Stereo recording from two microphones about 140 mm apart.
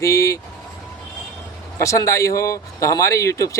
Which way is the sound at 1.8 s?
20° left (ahead or behind).